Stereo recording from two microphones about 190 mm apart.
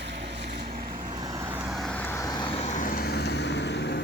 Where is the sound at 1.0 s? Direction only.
20° right (ahead or behind); by 4.0 s 65° left (ahead or behind).